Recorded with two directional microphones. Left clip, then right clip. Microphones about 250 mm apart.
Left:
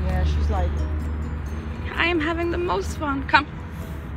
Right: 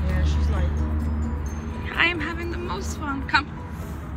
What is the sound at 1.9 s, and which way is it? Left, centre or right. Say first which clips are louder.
A woman's voice: left 1 dB; centre.